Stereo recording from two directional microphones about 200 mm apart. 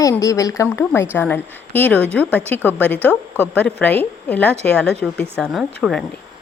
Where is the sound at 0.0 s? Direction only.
15° left (ahead or behind).